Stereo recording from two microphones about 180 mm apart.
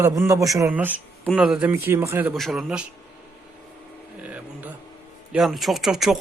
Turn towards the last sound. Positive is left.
turn(degrees=0)  # may be behind; listen again after turning